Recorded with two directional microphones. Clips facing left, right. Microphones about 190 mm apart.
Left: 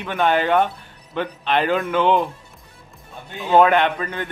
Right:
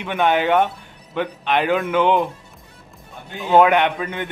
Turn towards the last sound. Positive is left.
turn(degrees=-15)  # may be behind; listen again after turning